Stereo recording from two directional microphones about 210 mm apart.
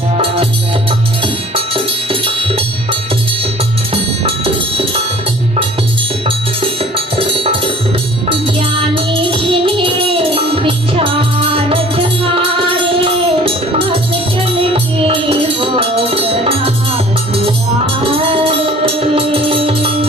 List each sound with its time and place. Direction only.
0.9 s music: 25° right (ahead or behind)
6.9 s music: 25° right (ahead or behind)
9.3 s music: 25° right (ahead or behind)
18.3 s music: 25° right (ahead or behind)